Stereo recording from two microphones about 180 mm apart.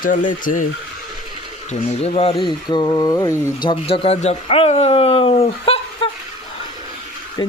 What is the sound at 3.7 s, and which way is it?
Speech, 35° left (ahead or behind).